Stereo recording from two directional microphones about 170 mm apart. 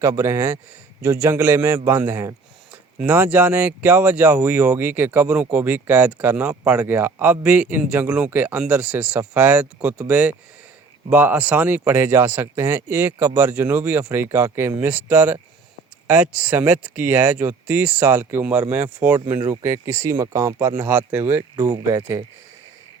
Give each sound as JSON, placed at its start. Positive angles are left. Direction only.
{"t": 0.0, "sound": "speech", "side_deg": -15}